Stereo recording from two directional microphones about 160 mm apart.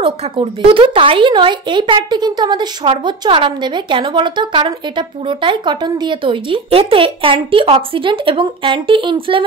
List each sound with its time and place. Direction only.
0.0 s a woman's voice: 35° right (ahead or behind)